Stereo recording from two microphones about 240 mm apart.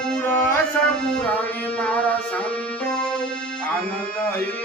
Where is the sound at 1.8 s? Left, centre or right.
Centre.